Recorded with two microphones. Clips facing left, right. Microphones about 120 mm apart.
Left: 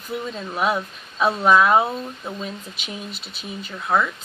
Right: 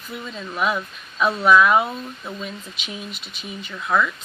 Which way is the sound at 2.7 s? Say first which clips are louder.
Even; 40° left (ahead or behind).